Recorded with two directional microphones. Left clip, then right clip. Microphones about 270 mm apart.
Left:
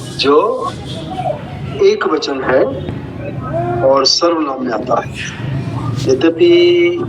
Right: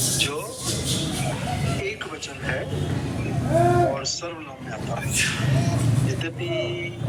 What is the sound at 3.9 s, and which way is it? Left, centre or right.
A man's voice, centre.